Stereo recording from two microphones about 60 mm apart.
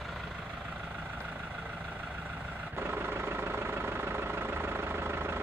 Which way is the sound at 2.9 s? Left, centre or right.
Right.